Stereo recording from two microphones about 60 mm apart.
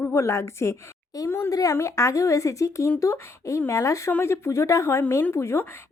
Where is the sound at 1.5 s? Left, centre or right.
Left.